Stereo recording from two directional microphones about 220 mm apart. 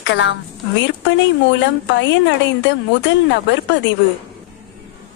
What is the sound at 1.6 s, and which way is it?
A woman's voice, 55° left (ahead or behind).